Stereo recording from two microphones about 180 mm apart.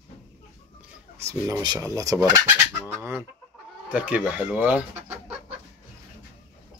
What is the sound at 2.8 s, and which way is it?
Chicken, 10° right (ahead or behind).